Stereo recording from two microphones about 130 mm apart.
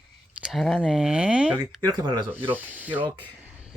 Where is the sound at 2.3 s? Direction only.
15° right (ahead or behind).